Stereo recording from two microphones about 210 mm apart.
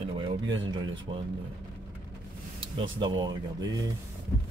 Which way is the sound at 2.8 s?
20° right (ahead or behind).